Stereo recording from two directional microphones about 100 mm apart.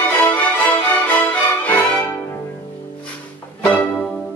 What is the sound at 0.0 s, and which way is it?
Music, 15° left (ahead or behind).